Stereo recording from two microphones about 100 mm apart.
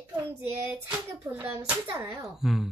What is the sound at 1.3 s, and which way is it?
Speech, 25° right (ahead or behind).